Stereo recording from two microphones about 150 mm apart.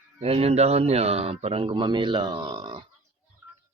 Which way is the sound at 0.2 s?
40° right (ahead or behind).